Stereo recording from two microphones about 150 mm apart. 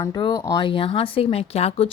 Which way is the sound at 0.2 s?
30° left (ahead or behind).